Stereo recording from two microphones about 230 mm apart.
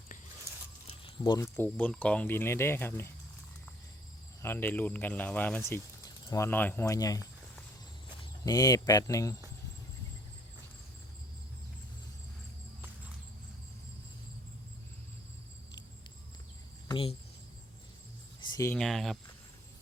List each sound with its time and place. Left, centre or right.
0.9 s speech: left
4.4 s speech: centre
16.9 s speech: left
18.3 s cricket: centre
18.8 s speech: centre